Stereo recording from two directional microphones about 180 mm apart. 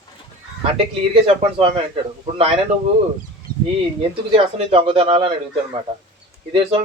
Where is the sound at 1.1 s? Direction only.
30° right (ahead or behind).